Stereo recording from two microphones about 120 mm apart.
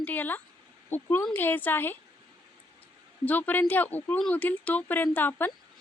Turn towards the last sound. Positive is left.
turn(degrees=15)  # may be behind; listen again after turning